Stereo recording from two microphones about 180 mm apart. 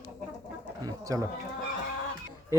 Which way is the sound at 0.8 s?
20° right (ahead or behind).